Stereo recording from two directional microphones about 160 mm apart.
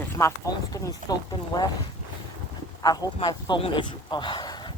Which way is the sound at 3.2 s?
30° left (ahead or behind).